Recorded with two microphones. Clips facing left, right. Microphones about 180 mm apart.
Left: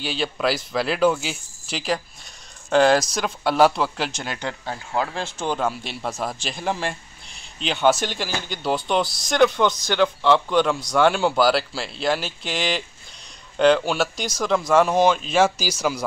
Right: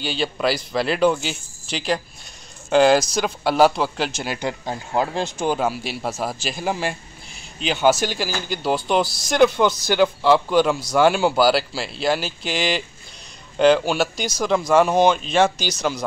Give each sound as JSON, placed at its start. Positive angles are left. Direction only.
{"t": 0.0, "sound": "speech", "side_deg": 0}